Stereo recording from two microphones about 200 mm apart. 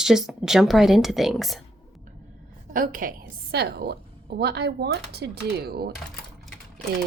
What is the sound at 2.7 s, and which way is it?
A woman's voice, 45° right (ahead or behind).